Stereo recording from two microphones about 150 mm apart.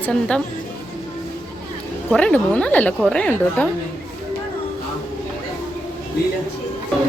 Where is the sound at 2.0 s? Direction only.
10° left (ahead or behind).